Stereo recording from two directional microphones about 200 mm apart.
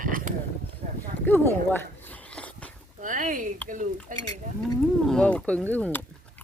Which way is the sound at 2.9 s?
40° right (ahead or behind).